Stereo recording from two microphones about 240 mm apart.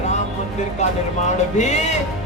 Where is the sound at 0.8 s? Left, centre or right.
Left.